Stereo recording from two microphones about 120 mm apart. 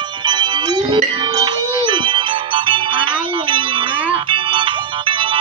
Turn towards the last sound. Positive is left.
turn(degrees=-45)  # may be behind; listen again after turning